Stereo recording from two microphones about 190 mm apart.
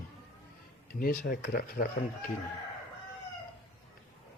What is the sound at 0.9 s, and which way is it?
Speech, 50° left (ahead or behind).